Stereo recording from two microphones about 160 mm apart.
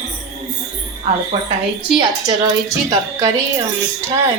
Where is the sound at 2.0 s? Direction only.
20° right (ahead or behind).